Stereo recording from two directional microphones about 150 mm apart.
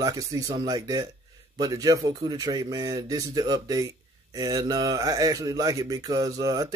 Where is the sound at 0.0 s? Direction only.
25° right (ahead or behind).